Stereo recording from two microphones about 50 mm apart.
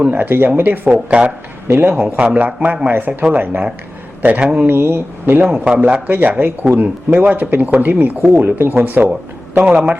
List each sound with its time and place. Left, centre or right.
0.0 s speech: right
0.9 s speech: right
1.6 s a man's voice: right
1.9 s speech: right
2.9 s speech: right
4.6 s speech: right
5.5 s speech: right
6.1 s speech: right
8.4 s speech: right
8.8 s speech: right